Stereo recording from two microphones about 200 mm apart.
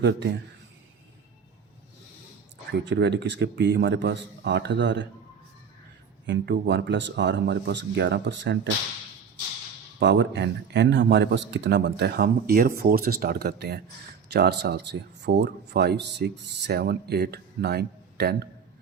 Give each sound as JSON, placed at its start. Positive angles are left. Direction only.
{"t": 0.0, "sound": "speech", "side_deg": -60}
{"t": 2.7, "sound": "speech", "side_deg": -60}
{"t": 6.2, "sound": "speech", "side_deg": -60}
{"t": 10.0, "sound": "speech", "side_deg": -65}